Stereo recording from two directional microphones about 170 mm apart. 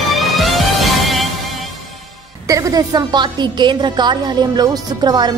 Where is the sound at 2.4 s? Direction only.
20° right (ahead or behind).